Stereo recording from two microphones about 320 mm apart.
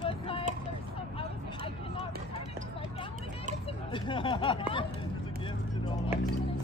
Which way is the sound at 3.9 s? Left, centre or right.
Centre.